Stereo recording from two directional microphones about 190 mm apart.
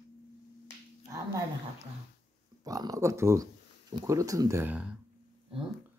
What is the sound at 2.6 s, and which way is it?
Speech, 20° right (ahead or behind).